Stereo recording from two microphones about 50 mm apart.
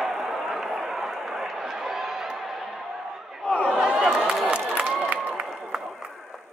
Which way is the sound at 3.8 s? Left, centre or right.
Centre.